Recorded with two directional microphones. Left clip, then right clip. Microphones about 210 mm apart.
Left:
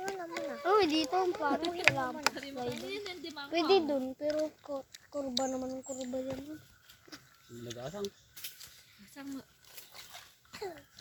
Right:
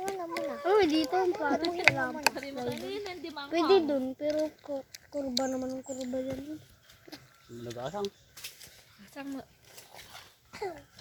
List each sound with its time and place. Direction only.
0.0 s a sound: centre (ahead or behind)
1.1 s speech: centre (ahead or behind)
1.4 s a child's voice: 10° right (ahead or behind)
1.6 s a child's voice: 5° left (ahead or behind)
7.7 s a child's voice: 10° left (ahead or behind)
9.2 s speech: 30° left (ahead or behind)
10.5 s a sound: centre (ahead or behind)